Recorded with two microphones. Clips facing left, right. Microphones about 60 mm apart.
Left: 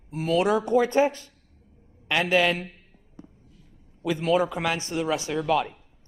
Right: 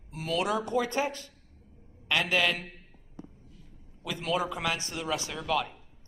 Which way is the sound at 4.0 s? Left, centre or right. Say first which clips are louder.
Left 8 dB; left.